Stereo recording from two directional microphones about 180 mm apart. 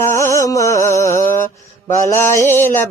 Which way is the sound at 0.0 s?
15° left (ahead or behind).